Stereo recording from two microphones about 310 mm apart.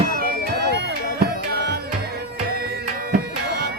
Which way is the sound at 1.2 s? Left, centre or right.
Right.